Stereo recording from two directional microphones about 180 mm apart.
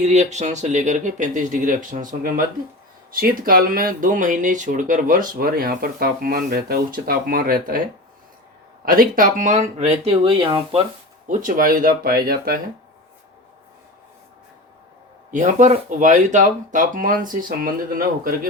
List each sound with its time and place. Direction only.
0.0 s speech: 40° right (ahead or behind)
8.8 s speech: 55° right (ahead or behind); by 10.8 s 25° right (ahead or behind)
11.3 s speech: 45° right (ahead or behind)
15.3 s speech: 45° right (ahead or behind)